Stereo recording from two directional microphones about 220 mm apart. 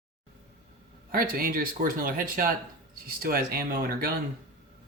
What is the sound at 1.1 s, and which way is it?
Speech, 40° right (ahead or behind).